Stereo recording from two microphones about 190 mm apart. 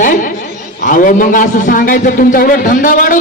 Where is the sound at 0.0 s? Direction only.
45° left (ahead or behind).